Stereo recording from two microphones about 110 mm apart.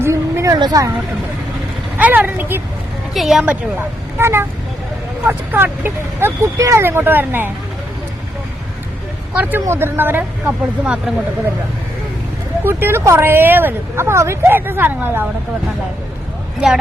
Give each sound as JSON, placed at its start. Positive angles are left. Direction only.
{"t": 0.0, "sound": "a sound", "side_deg": -25}
{"t": 0.5, "sound": "speech", "side_deg": -35}
{"t": 2.0, "sound": "speech", "side_deg": -15}
{"t": 3.2, "sound": "a woman's voice", "side_deg": -5}
{"t": 3.4, "sound": "speech", "side_deg": -15}
{"t": 9.3, "sound": "speech", "side_deg": -15}
{"t": 12.6, "sound": "speech", "side_deg": -20}